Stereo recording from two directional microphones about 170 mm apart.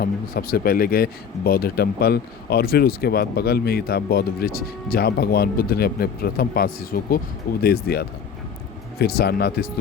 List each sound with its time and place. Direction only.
0.0 s speech: 60° left (ahead or behind)